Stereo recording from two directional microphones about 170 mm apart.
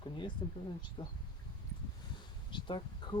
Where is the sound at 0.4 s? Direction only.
25° left (ahead or behind).